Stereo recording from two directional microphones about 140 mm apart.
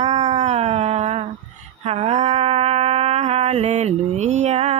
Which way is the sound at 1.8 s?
45° right (ahead or behind).